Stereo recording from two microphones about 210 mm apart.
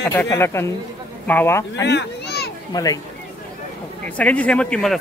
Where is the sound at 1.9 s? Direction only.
50° left (ahead or behind).